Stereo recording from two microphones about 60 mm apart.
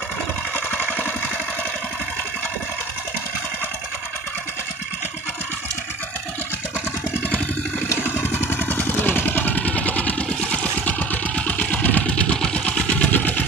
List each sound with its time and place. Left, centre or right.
8.0 s vehicle: left